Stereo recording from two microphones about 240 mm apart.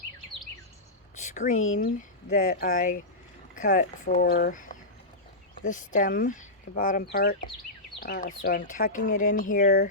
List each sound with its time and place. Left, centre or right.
1.2 s a sound: left
1.5 s speech: left
1.8 s speech: left